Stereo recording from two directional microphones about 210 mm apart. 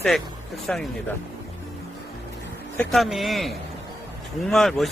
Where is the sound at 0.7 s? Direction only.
5° left (ahead or behind).